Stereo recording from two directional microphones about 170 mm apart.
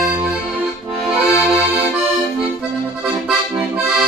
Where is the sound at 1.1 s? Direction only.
15° left (ahead or behind).